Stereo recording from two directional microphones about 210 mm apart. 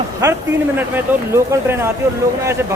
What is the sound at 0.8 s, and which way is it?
Speech, 10° right (ahead or behind).